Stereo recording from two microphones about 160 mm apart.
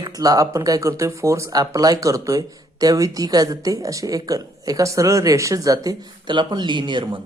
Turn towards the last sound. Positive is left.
turn(degrees=-30)  # may be behind; listen again after turning